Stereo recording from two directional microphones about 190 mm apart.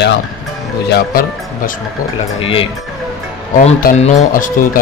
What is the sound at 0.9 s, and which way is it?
Speech, 50° left (ahead or behind).